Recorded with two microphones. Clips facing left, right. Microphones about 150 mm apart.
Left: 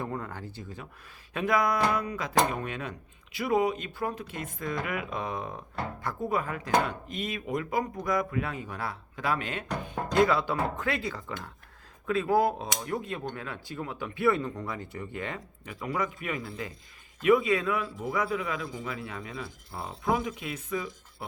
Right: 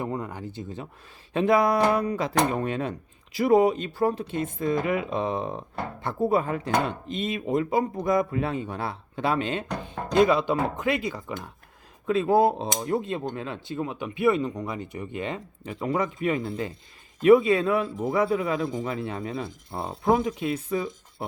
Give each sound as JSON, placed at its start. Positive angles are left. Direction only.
{"t": 0.0, "sound": "speech", "side_deg": -15}